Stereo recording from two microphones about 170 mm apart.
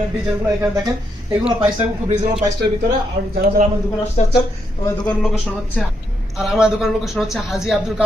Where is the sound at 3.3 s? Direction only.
60° right (ahead or behind).